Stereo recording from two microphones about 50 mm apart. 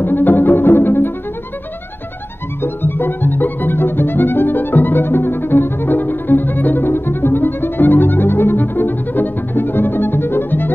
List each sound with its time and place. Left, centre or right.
0.0 s cello: left
2.6 s music: left